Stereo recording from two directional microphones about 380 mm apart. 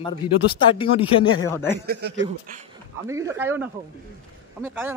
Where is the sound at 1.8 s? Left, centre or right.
Right.